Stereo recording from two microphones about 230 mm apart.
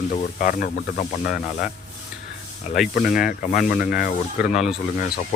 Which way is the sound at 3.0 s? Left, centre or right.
Left.